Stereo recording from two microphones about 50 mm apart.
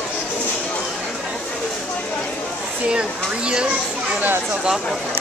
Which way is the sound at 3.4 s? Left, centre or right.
Centre.